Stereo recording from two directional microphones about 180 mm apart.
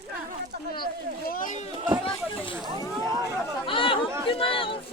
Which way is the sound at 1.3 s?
50° left (ahead or behind).